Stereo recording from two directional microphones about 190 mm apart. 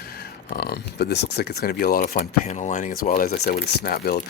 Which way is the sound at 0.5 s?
55° left (ahead or behind).